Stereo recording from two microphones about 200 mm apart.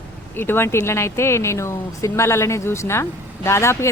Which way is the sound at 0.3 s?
10° left (ahead or behind).